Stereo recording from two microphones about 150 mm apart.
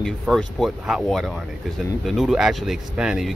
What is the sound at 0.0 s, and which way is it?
Speech, centre (ahead or behind).